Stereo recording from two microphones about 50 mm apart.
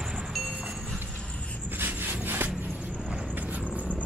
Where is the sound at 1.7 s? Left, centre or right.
Right.